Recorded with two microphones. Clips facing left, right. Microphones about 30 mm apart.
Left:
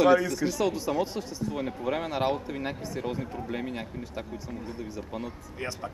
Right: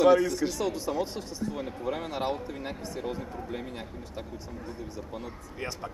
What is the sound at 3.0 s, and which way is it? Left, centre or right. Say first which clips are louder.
Speech: left 1 dB; centre.